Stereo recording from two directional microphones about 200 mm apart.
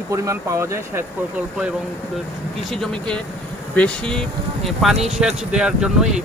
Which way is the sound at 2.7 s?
5° left (ahead or behind).